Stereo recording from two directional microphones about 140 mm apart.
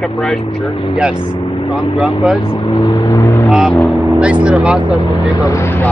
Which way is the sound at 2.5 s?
35° left (ahead or behind).